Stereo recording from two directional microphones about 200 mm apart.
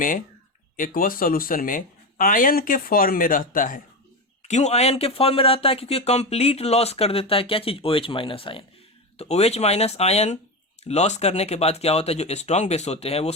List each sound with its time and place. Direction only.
0.8 s speech: 45° left (ahead or behind)